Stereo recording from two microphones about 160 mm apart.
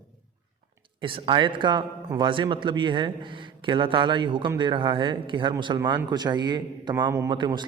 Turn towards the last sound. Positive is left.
turn(degrees=-20)  # may be behind; listen again after turning